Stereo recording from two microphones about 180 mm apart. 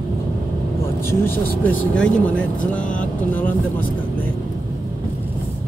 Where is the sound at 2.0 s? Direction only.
5° left (ahead or behind).